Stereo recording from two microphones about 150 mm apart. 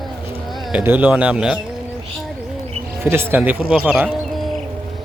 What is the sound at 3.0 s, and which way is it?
Speech, 15° right (ahead or behind).